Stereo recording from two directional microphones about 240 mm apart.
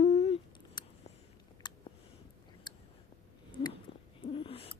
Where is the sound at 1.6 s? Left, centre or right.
Centre.